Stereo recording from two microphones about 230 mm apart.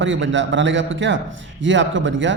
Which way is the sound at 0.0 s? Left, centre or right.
Right.